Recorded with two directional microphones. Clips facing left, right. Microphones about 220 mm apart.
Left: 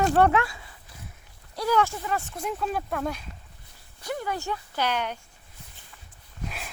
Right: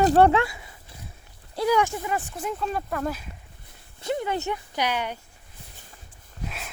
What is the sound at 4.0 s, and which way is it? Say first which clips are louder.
Speech: right 4 dB; 25° right (ahead or behind).